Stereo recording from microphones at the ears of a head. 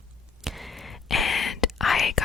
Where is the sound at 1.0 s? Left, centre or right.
Left.